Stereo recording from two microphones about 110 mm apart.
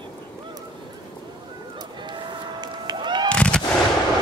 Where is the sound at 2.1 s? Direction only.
40° right (ahead or behind).